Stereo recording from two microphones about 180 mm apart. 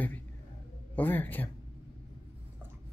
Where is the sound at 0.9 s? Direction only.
10° left (ahead or behind).